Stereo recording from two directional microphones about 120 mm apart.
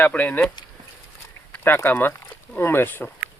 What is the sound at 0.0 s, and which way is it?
Speech, 10° left (ahead or behind).